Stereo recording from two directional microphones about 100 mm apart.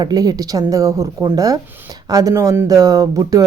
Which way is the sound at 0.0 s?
40° right (ahead or behind).